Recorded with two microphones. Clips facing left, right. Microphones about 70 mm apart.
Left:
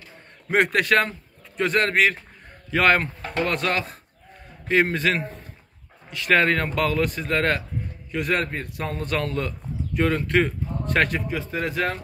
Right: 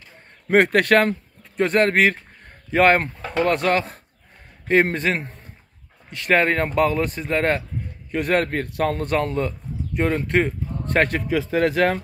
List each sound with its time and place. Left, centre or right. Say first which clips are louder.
0.5 s a man's voice: right 4 dB; right
1.6 s speech: right 3 dB; right
8.1 s a man's voice: right 4 dB; right
9.1 s a man's voice: right 4 dB; right
11.5 s speech: right 7 dB; right